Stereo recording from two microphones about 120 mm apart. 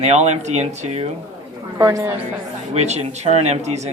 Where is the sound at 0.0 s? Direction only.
70° right (ahead or behind).